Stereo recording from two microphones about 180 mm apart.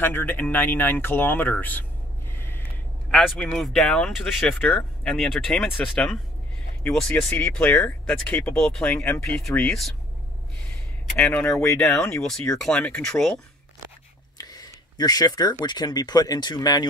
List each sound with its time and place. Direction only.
0.0 s speech: 10° left (ahead or behind)
2.3 s a sound: 10° left (ahead or behind)
3.1 s speech: 5° left (ahead or behind)
11.1 s speech: 5° left (ahead or behind)
14.4 s a sound: 20° left (ahead or behind)
15.6 s speech: 25° left (ahead or behind)